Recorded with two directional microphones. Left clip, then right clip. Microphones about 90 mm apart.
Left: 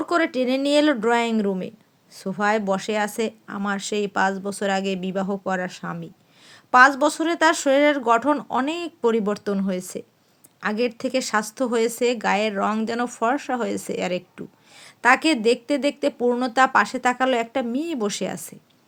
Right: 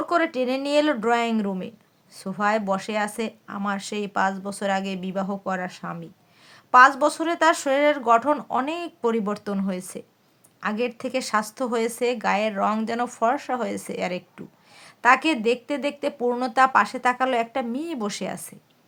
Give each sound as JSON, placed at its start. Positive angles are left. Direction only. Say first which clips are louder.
{"t": 0.0, "sound": "speech", "louder": "left 1 dB", "side_deg": 30}